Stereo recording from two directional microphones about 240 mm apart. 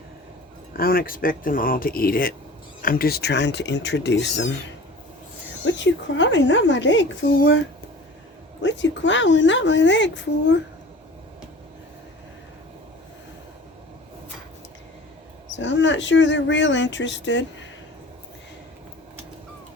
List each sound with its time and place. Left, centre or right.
0.8 s speech: left
5.6 s speech: left
8.6 s speech: left
15.5 s speech: left